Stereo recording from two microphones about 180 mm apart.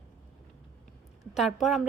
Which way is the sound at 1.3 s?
Centre (ahead or behind).